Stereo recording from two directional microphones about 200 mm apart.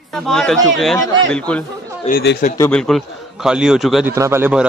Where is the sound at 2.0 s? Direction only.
45° left (ahead or behind).